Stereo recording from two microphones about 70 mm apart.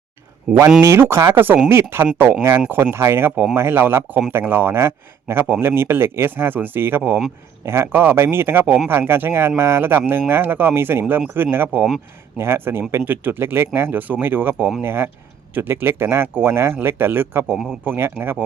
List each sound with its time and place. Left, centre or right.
0.8 s speech: right